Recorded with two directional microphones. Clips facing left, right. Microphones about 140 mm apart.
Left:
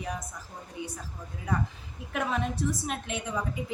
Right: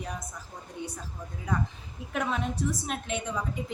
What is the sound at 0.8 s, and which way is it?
Speech, 5° left (ahead or behind).